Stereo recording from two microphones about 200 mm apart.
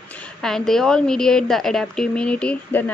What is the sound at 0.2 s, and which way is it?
A woman's voice, centre (ahead or behind).